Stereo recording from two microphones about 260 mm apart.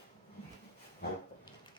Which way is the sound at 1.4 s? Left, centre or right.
Centre.